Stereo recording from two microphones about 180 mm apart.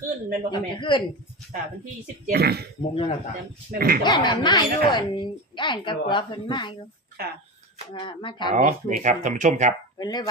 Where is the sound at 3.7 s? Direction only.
55° right (ahead or behind).